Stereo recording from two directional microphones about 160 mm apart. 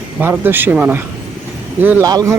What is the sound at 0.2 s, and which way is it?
A man's voice, 15° right (ahead or behind).